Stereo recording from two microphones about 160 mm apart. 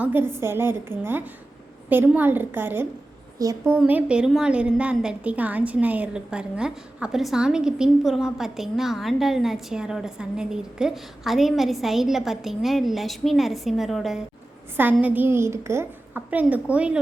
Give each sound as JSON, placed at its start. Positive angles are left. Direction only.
{"t": 0.0, "sound": "a child's voice", "side_deg": -10}
{"t": 3.8, "sound": "a woman's voice", "side_deg": -10}
{"t": 15.0, "sound": "a child's voice", "side_deg": -10}